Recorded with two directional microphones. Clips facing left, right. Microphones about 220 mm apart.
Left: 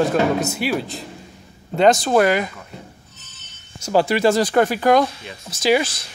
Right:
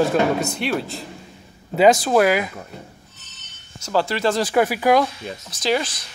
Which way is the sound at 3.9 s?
15° left (ahead or behind).